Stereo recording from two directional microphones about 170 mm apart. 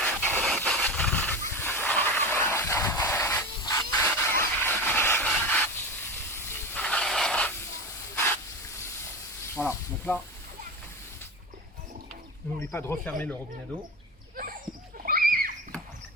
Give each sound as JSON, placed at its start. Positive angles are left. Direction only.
{"t": 0.0, "sound": "steam", "side_deg": 10}
{"t": 0.4, "sound": "wild animals", "side_deg": 0}
{"t": 6.5, "sound": "hiss", "side_deg": 5}
{"t": 9.6, "sound": "snake", "side_deg": 10}
{"t": 12.7, "sound": "speech", "side_deg": 15}
{"t": 15.0, "sound": "a sound", "side_deg": -60}